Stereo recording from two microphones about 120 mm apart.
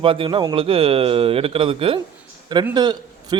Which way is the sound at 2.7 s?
35° right (ahead or behind).